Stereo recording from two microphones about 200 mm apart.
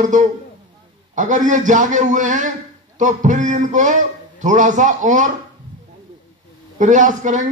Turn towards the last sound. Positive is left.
turn(degrees=-40)  # may be behind; listen again after turning